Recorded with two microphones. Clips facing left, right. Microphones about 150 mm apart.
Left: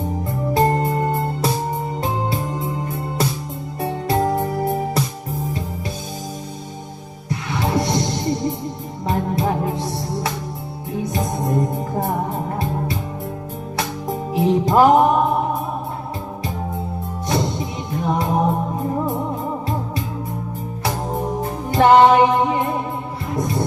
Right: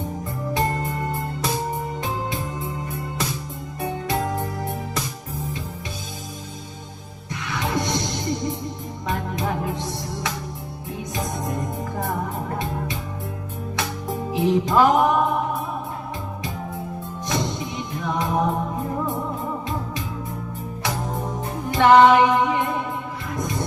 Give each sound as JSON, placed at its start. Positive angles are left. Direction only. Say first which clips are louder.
{"t": 0.5, "sound": "music", "louder": "left 7 dB", "side_deg": 35}
{"t": 3.8, "sound": "music", "louder": "left 5 dB", "side_deg": 30}
{"t": 7.3, "sound": "music", "louder": "left 5 dB", "side_deg": 30}
{"t": 9.0, "sound": "music", "louder": "left 5 dB", "side_deg": 30}
{"t": 13.7, "sound": "music", "louder": "left 3 dB", "side_deg": 35}
{"t": 17.2, "sound": "music", "louder": "left 4 dB", "side_deg": 35}
{"t": 20.8, "sound": "music", "louder": "left 4 dB", "side_deg": 30}